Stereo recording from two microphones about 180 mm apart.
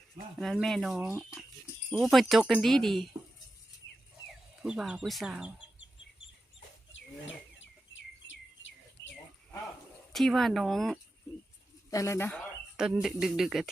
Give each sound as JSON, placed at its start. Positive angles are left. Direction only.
{"t": 0.3, "sound": "speech", "side_deg": 0}
{"t": 4.6, "sound": "speech", "side_deg": -5}
{"t": 6.9, "sound": "bird", "side_deg": 90}
{"t": 10.1, "sound": "speech", "side_deg": 0}
{"t": 11.9, "sound": "speech", "side_deg": 15}
{"t": 12.7, "sound": "speech", "side_deg": -5}